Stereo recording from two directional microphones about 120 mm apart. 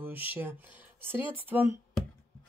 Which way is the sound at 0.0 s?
15° right (ahead or behind).